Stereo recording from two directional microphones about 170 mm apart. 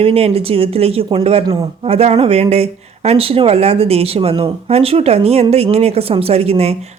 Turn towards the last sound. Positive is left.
turn(degrees=-35)  # may be behind; listen again after turning